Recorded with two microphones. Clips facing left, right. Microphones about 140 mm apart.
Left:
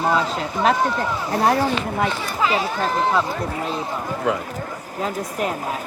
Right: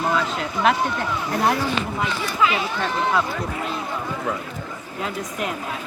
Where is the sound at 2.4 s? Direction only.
35° left (ahead or behind).